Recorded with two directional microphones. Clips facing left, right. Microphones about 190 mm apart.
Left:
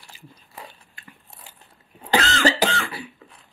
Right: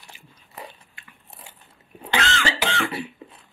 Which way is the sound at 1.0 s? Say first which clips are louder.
Left 4 dB; 40° left (ahead or behind).